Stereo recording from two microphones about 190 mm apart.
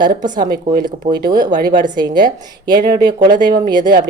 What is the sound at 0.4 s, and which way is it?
Speech, 50° right (ahead or behind).